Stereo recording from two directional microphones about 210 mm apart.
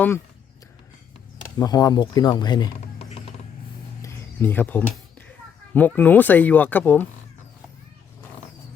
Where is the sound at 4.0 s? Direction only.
10° left (ahead or behind).